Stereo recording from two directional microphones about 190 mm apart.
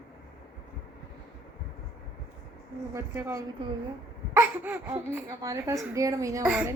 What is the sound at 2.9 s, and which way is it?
Speech, 15° right (ahead or behind).